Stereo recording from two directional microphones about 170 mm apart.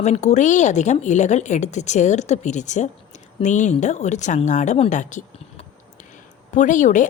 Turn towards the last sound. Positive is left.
turn(degrees=45)  # may be behind; listen again after turning